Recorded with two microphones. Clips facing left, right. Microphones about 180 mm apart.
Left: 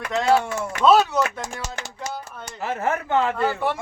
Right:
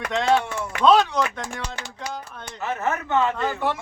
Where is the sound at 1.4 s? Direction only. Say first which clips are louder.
Even; 40° left (ahead or behind).